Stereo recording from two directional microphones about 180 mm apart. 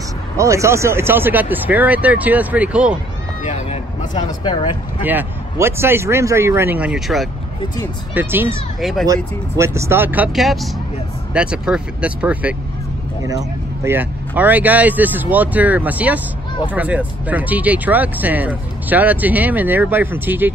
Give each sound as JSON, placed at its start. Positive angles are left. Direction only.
{"t": 0.4, "sound": "speech", "side_deg": -15}
{"t": 3.4, "sound": "a sound", "side_deg": 45}
{"t": 4.3, "sound": "speech", "side_deg": 25}
{"t": 5.0, "sound": "speech", "side_deg": -10}
{"t": 13.8, "sound": "speech", "side_deg": -10}